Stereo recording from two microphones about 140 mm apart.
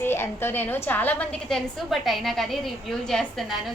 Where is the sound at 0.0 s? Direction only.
15° left (ahead or behind).